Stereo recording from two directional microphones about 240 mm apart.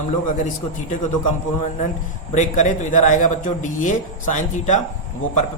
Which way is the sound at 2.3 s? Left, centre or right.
Left.